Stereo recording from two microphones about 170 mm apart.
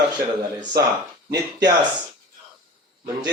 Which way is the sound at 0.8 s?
70° right (ahead or behind).